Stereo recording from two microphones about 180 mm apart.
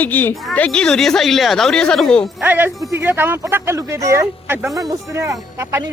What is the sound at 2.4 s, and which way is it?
Speech, 10° right (ahead or behind).